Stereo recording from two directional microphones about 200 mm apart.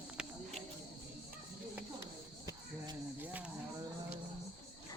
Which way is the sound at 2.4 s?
15° right (ahead or behind).